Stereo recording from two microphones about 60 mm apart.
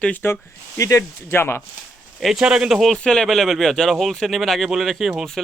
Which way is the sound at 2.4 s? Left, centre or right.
Centre.